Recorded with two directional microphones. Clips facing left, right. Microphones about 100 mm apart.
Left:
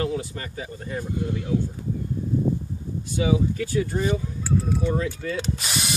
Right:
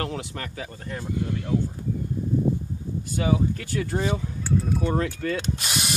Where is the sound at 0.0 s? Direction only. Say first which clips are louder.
Left 3 dB; 70° right (ahead or behind).